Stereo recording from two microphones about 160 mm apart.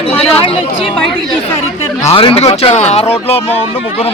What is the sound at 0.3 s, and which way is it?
Speech, 35° left (ahead or behind).